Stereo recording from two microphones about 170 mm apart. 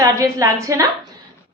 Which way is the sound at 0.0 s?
20° right (ahead or behind).